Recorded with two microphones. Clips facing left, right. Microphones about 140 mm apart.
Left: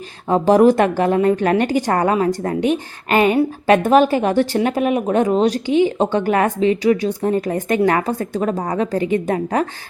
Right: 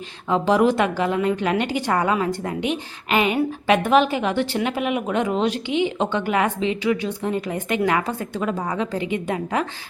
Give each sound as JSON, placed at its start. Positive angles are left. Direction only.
{"t": 0.3, "sound": "a woman's voice", "side_deg": 45}